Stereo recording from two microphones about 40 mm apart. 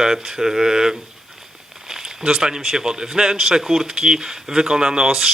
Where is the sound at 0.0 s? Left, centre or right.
Centre.